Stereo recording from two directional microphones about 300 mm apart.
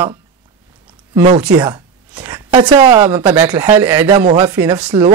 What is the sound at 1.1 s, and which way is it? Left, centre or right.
A woman's voice, right.